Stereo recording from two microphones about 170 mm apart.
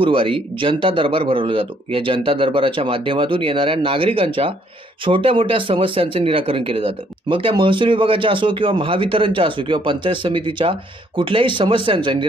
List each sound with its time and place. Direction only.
0.0 s speech: 30° right (ahead or behind)